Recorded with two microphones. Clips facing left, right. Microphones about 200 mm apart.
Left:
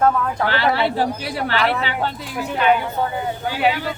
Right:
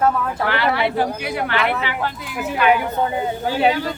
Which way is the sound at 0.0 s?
5° right (ahead or behind).